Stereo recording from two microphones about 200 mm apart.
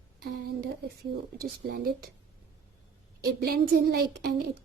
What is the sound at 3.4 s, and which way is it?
Speech, 50° right (ahead or behind).